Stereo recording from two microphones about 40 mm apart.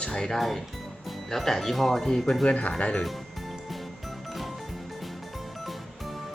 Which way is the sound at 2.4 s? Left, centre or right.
Left.